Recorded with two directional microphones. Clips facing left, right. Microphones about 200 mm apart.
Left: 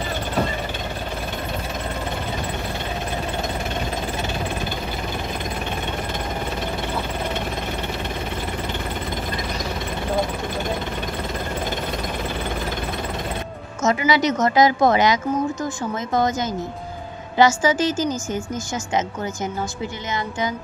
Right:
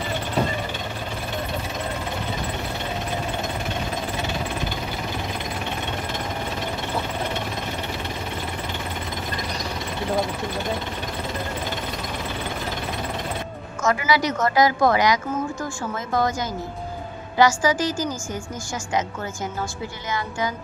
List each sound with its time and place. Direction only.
13.8 s a woman's voice: 20° left (ahead or behind)
20.1 s a woman's voice: 20° left (ahead or behind)